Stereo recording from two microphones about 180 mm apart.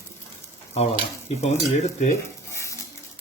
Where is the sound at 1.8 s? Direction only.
40° left (ahead or behind).